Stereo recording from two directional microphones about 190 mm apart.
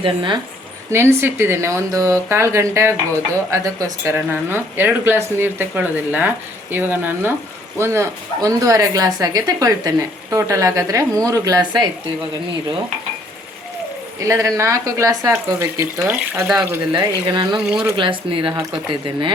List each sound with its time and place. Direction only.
0.0 s speech: 25° right (ahead or behind)
0.9 s speech: 15° right (ahead or behind)
14.2 s speech: 15° right (ahead or behind)
17.2 s speech: 25° right (ahead or behind)